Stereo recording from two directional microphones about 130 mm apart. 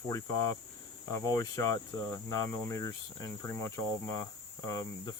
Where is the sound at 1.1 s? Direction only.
25° left (ahead or behind).